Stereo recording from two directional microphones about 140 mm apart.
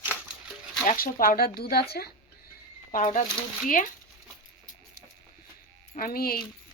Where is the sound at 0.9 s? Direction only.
85° left.